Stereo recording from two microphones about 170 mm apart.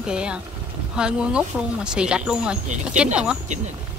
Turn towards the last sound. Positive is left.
turn(degrees=-5)  # may be behind; listen again after turning